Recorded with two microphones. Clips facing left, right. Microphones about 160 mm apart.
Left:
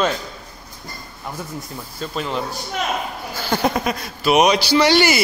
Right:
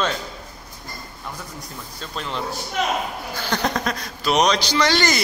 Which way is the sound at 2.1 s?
5° left (ahead or behind).